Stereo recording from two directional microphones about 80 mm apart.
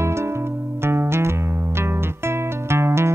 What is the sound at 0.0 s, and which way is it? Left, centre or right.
Music, right.